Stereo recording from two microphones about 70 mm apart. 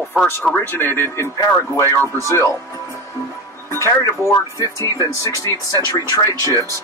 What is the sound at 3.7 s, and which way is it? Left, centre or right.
Speech, left.